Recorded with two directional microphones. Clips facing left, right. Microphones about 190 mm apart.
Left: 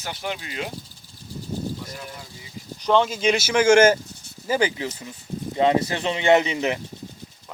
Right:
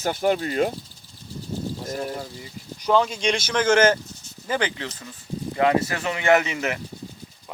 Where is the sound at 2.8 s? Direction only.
5° right (ahead or behind); by 6.8 s 20° left (ahead or behind).